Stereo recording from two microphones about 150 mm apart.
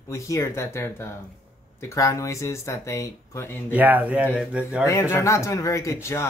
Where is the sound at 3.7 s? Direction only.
10° right (ahead or behind).